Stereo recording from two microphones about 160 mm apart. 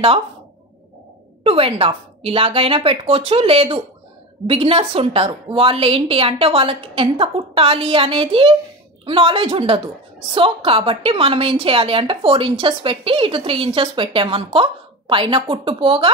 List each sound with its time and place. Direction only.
1.4 s a woman's voice: 35° right (ahead or behind)